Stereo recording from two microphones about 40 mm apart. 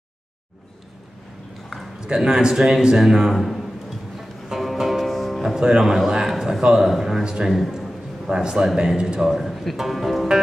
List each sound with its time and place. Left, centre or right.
2.1 s a man's voice: centre
3.3 s a man's voice: centre
4.6 s music: centre
5.8 s a man's voice: centre
7.2 s a man's voice: centre